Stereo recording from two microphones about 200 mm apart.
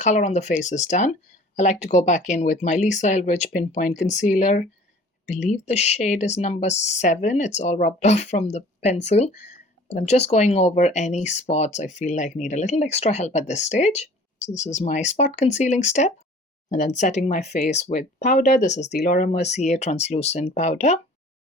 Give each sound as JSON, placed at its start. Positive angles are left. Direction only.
{"t": 0.0, "sound": "speech", "side_deg": 35}
{"t": 18.9, "sound": "speech", "side_deg": 50}